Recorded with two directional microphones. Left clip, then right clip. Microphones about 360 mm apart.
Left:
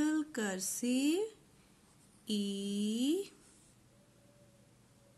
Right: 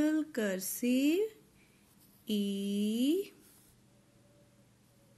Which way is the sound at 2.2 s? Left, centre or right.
Centre.